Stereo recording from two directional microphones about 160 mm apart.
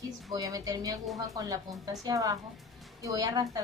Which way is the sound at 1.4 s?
20° right (ahead or behind).